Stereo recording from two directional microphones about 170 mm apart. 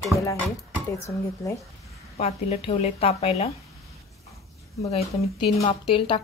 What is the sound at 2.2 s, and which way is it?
Speech, 40° left (ahead or behind).